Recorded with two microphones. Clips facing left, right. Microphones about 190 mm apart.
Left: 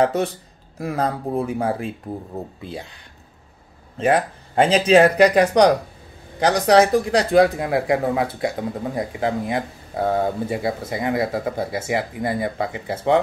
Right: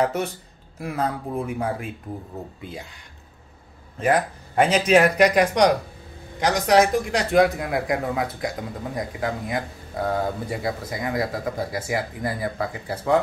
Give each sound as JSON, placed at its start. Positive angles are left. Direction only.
{"t": 0.0, "sound": "speech", "side_deg": 35}
{"t": 4.0, "sound": "speech", "side_deg": 25}